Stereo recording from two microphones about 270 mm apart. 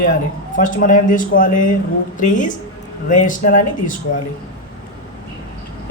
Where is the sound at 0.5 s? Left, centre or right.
Left.